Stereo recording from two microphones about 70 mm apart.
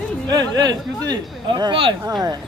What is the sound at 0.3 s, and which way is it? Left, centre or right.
Speech, right.